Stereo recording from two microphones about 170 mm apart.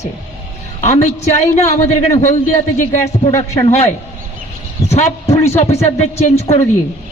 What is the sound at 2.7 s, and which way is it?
Speech, 50° left (ahead or behind).